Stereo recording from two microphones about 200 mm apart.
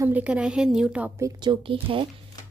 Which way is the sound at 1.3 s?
20° right (ahead or behind).